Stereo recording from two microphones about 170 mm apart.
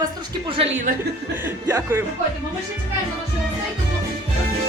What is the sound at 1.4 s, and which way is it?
Speech, 15° right (ahead or behind).